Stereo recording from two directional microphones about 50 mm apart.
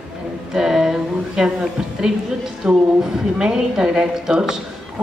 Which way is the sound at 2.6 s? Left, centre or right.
Centre.